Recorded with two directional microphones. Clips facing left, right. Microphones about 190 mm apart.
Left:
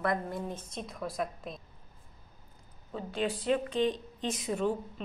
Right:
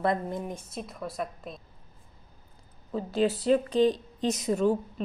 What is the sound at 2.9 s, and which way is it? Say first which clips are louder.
A woman's voice: right 7 dB; 40° right (ahead or behind).